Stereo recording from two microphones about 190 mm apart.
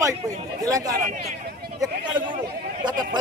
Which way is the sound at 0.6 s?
20° right (ahead or behind).